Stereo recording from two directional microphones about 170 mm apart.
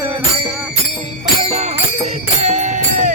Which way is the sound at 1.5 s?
40° right (ahead or behind).